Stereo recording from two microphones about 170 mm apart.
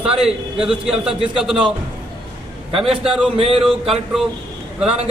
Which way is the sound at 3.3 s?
35° right (ahead or behind).